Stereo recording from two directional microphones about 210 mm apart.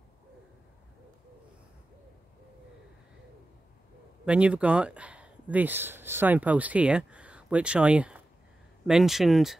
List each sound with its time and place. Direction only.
4.3 s speech: 5° right (ahead or behind)